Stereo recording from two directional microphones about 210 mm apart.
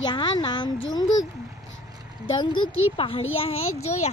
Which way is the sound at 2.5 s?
75° left (ahead or behind).